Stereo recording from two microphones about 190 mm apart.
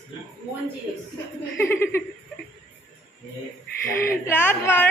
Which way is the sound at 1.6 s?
10° left (ahead or behind).